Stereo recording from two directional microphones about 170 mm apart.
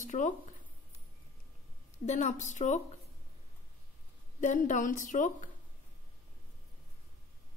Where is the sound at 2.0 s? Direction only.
45° left (ahead or behind).